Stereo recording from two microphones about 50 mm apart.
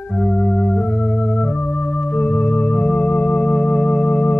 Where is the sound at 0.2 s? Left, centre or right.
Left.